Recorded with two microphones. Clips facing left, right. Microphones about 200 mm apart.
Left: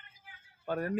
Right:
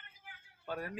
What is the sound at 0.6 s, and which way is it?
Speech, 50° left (ahead or behind).